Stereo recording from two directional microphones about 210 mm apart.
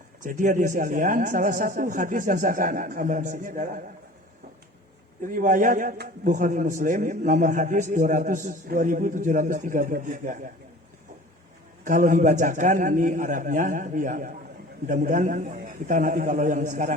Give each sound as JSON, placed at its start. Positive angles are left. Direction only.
{"t": 0.2, "sound": "a man's voice", "side_deg": -40}
{"t": 5.2, "sound": "a man's voice", "side_deg": -40}
{"t": 11.9, "sound": "a man's voice", "side_deg": -40}